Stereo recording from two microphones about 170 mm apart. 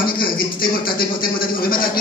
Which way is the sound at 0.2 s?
60° left (ahead or behind).